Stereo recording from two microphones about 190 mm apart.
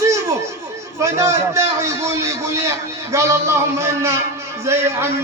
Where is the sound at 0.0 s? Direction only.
15° right (ahead or behind).